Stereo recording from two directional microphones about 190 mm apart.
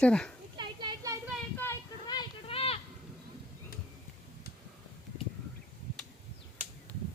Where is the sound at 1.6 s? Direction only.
15° left (ahead or behind).